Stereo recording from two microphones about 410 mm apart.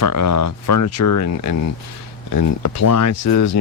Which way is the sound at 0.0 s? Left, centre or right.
Left.